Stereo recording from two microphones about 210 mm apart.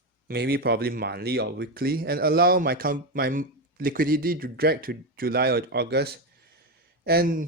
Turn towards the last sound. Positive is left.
turn(degrees=-45)  # may be behind; listen again after turning